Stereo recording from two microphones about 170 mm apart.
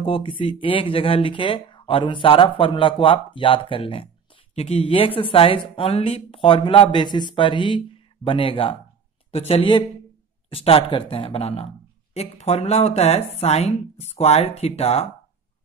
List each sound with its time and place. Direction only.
0.0 s speech: 30° left (ahead or behind)